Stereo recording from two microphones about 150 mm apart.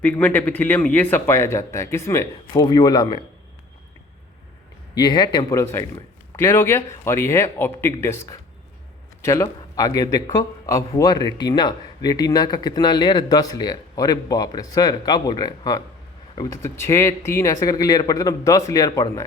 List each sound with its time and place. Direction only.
0.0 s a man's voice: 10° left (ahead or behind); by 3.2 s 30° left (ahead or behind)
4.9 s a man's voice: 30° left (ahead or behind)